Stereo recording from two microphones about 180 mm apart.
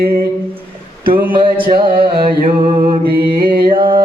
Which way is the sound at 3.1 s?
55° right (ahead or behind).